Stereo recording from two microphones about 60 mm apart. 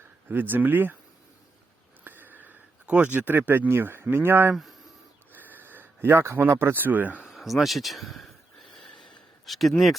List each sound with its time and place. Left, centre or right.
0.3 s speech: right
2.0 s a sound: right
2.8 s speech: right
4.5 s speech: centre
5.3 s speech: right
7.2 s a sound: centre
9.5 s speech: centre